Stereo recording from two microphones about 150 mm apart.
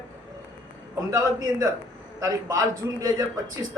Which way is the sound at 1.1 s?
25° right (ahead or behind).